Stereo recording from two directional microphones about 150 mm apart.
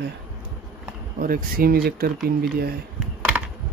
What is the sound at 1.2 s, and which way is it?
Speech, 75° right (ahead or behind).